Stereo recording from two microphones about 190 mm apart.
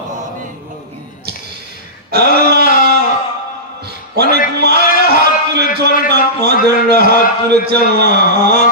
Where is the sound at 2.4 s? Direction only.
55° right (ahead or behind).